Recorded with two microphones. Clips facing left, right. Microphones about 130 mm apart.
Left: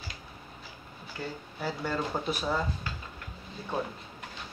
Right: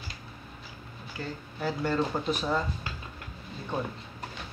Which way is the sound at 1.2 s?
10° left (ahead or behind).